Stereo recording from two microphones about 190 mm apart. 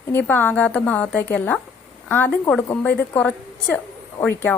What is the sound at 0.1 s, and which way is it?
A woman's voice, 10° left (ahead or behind).